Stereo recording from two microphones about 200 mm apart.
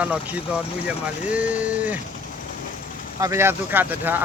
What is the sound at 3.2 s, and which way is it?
Speech, 15° right (ahead or behind).